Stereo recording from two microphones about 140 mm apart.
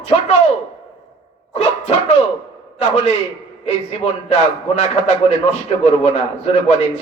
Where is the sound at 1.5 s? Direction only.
50° left (ahead or behind).